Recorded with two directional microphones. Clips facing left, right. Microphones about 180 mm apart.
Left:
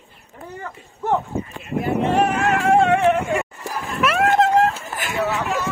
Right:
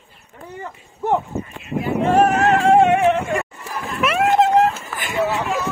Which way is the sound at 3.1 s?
10° left (ahead or behind).